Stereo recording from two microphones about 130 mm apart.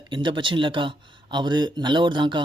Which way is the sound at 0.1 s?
40° right (ahead or behind).